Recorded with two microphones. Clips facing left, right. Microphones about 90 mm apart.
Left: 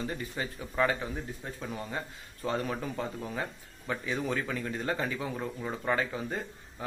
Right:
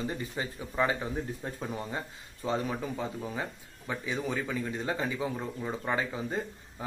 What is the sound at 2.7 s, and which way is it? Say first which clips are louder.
Speech: even; 5° right (ahead or behind).